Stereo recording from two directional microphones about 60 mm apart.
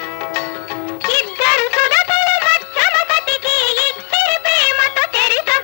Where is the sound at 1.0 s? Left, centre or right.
Left.